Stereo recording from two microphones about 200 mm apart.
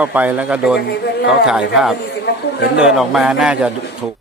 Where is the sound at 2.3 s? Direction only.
55° left (ahead or behind).